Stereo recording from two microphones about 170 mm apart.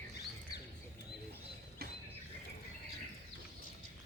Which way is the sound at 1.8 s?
65° right (ahead or behind).